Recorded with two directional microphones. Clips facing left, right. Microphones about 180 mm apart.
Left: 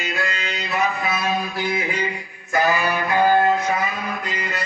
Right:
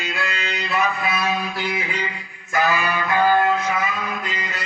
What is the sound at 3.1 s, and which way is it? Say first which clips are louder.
Music: left 1 dB; 15° left (ahead or behind).